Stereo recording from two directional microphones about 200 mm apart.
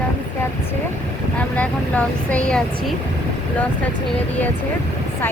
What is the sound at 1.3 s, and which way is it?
Speech, 5° left (ahead or behind).